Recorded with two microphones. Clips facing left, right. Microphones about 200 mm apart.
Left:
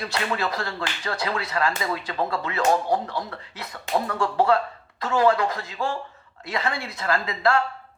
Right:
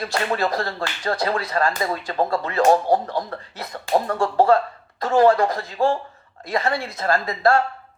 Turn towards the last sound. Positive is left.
turn(degrees=-45)  # may be behind; listen again after turning